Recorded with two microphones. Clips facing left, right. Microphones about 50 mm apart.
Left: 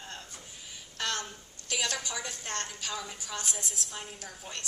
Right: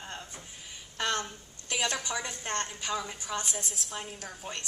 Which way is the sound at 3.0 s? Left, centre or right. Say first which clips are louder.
Right 4 dB; centre.